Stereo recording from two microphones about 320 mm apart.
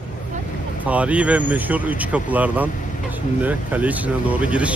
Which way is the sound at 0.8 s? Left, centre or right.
Centre.